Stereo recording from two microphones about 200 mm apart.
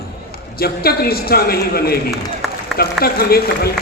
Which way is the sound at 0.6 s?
50° left (ahead or behind).